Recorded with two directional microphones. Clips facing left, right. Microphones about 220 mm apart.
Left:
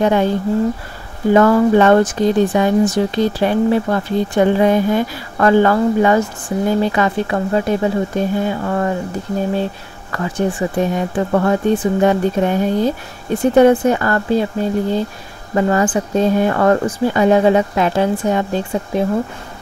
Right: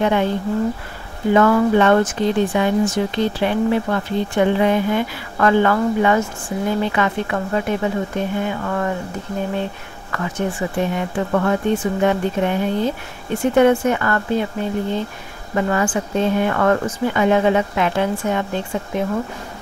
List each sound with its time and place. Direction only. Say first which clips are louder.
0.0 s speech: left 3 dB; 40° left (ahead or behind)
1.3 s speech: left 3 dB; 40° left (ahead or behind)
10.1 s speech: left 4 dB; 35° left (ahead or behind)